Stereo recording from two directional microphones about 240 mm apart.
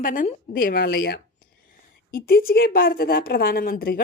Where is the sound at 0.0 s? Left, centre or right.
Left.